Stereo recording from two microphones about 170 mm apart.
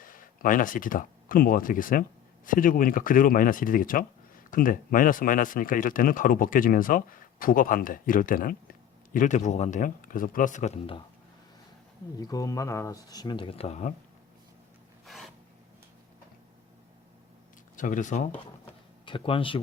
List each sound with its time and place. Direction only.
0.0 s speech: 55° left (ahead or behind)
12.1 s speech: 20° left (ahead or behind); by 13.9 s 40° left (ahead or behind)
15.0 s filing: centre (ahead or behind)
17.7 s speech: 50° left (ahead or behind)
19.0 s speech: 30° left (ahead or behind)